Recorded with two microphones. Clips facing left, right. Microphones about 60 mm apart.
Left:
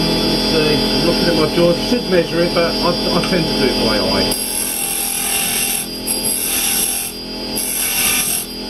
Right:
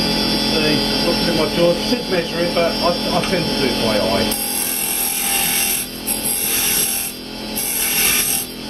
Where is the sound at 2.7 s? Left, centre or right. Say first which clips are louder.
Left 1 dB; centre.